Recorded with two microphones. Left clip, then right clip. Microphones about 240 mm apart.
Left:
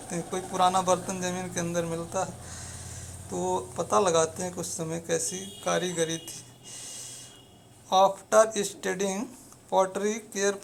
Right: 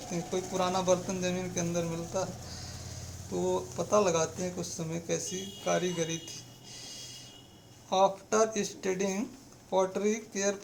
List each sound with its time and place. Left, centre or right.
0.1 s speech: centre
3.3 s speech: centre
7.9 s speech: centre